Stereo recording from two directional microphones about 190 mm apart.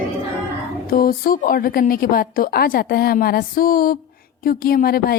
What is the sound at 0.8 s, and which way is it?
A woman's voice, 50° left (ahead or behind).